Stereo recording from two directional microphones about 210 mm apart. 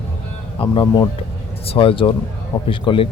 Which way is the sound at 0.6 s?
25° left (ahead or behind).